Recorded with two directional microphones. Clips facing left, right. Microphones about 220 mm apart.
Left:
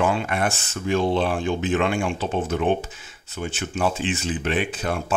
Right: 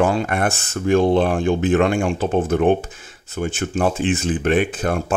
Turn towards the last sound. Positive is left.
turn(degrees=-50)  # may be behind; listen again after turning